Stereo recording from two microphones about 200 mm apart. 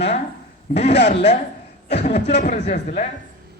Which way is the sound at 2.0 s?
35° left (ahead or behind).